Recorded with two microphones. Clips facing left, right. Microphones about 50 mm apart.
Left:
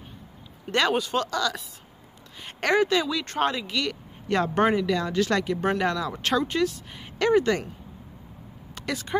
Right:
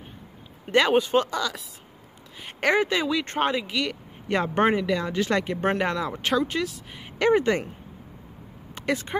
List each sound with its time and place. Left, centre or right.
0.7 s speech: centre
6.2 s speech: centre
7.2 s speech: right
8.7 s speech: right